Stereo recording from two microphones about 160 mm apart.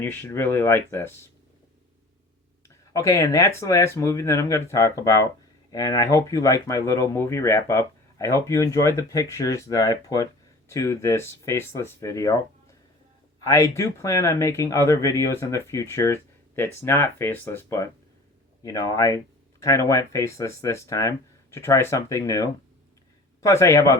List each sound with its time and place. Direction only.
0.0 s speech: 15° left (ahead or behind)
2.6 s speech: 20° left (ahead or behind)